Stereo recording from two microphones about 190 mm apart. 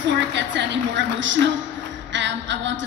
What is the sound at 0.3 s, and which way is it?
A woman's voice, 70° right (ahead or behind).